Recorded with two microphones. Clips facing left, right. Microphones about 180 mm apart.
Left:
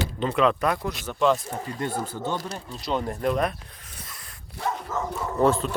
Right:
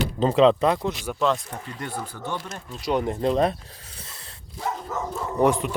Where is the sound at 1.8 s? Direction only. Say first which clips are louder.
Left 4 dB; 25° left (ahead or behind).